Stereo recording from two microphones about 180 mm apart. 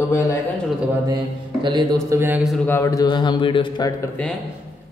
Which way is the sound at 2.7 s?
15° left (ahead or behind).